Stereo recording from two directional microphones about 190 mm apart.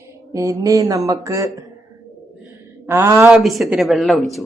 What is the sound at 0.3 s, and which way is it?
Mantra, 15° right (ahead or behind).